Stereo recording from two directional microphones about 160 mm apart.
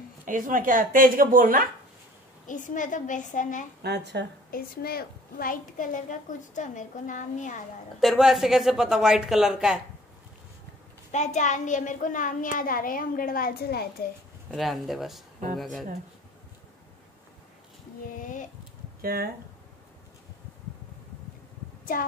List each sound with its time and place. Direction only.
0.2 s speech: 55° right (ahead or behind)
2.4 s a woman's voice: 55° left (ahead or behind)
3.8 s a woman's voice: 90° right
4.5 s a woman's voice: 65° left (ahead or behind); by 7.6 s 50° left (ahead or behind)
8.0 s speech: centre (ahead or behind)
11.1 s a child's voice: 50° left (ahead or behind); by 13.8 s 75° left (ahead or behind)
14.5 s speech: centre (ahead or behind)
18.2 s a sound: 55° left (ahead or behind)
18.9 s speech: 70° right (ahead or behind)
21.9 s a child's voice: 60° left (ahead or behind)